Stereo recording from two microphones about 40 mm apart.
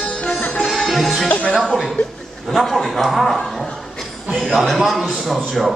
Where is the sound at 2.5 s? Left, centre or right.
Centre.